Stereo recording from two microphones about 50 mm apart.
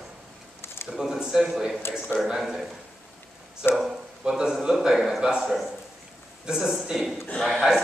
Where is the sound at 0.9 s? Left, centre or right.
Centre.